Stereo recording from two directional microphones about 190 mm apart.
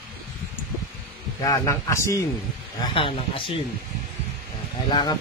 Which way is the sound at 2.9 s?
30° left (ahead or behind).